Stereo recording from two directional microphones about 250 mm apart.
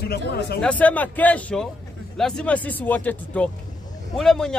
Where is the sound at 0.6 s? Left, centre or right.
Centre.